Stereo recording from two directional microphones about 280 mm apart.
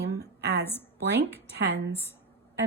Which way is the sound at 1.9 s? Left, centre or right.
Centre.